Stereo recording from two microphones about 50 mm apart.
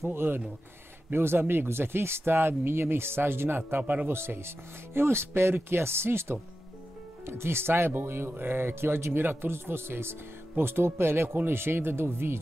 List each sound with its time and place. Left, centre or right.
0.1 s speech: right
4.1 s speech: right